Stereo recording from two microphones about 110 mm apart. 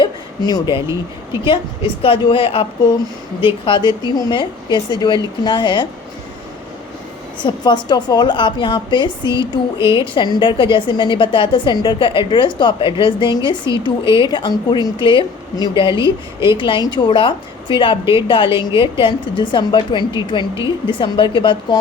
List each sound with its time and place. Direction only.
0.0 s a sound: 40° left (ahead or behind)
1.5 s a woman's voice: 50° left (ahead or behind)
3.7 s a woman's voice: 45° left (ahead or behind)
7.3 s a woman's voice: 45° left (ahead or behind)